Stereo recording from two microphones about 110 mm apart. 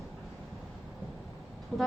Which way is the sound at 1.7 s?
5° left (ahead or behind).